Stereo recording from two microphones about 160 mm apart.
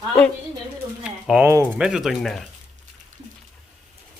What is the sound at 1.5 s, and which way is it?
Speech, 15° right (ahead or behind).